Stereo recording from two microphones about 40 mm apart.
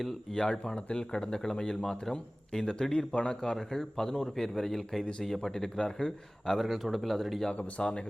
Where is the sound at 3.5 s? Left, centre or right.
Centre.